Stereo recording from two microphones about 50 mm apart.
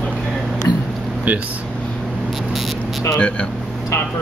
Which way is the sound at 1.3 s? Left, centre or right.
Right.